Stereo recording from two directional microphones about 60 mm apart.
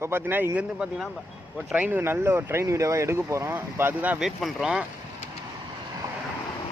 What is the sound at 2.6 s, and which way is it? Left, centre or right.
Speech, right.